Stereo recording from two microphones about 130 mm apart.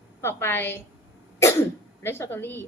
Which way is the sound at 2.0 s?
15° left (ahead or behind).